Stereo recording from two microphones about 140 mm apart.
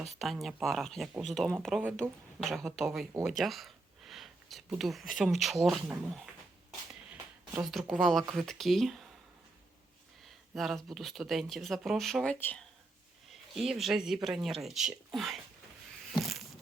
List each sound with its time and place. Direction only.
0.2 s speech: centre (ahead or behind)
3.1 s speech: 15° right (ahead or behind)
3.3 s speech: centre (ahead or behind)
7.6 s speech: centre (ahead or behind)
10.2 s speech: centre (ahead or behind)
13.3 s speech: centre (ahead or behind)
16.1 s a sound: centre (ahead or behind)